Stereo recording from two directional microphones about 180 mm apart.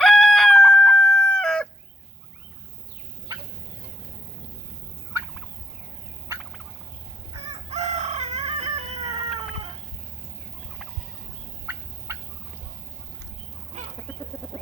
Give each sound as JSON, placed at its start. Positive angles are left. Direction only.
{"t": 0.0, "sound": "chicken", "side_deg": 5}
{"t": 7.7, "sound": "chicken", "side_deg": -40}
{"t": 11.6, "sound": "fowl", "side_deg": -10}
{"t": 13.7, "sound": "chicken", "side_deg": -40}
{"t": 14.4, "sound": "chicken", "side_deg": 10}